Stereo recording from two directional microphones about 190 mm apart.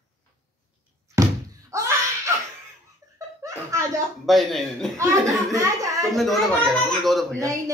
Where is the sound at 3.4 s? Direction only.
15° right (ahead or behind).